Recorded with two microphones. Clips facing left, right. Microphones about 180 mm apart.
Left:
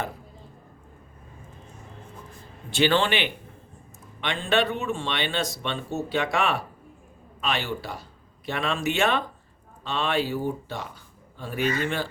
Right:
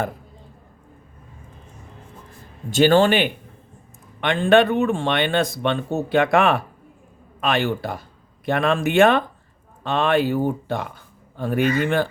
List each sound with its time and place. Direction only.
2.6 s speech: 45° right (ahead or behind)